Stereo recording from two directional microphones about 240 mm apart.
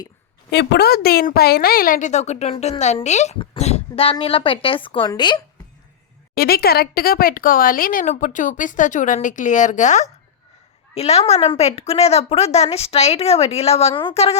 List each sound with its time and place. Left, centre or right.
0.5 s a woman's voice: left; by 5.4 s centre
6.3 s a woman's voice: left